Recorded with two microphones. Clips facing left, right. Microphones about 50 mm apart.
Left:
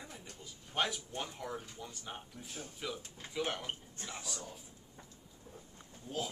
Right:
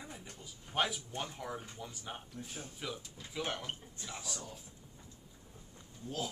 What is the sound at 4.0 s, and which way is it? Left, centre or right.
Speech, left.